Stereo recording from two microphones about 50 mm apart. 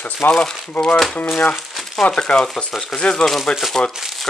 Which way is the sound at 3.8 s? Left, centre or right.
Centre.